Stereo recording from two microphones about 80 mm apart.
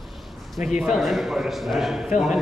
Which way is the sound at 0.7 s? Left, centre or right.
Centre.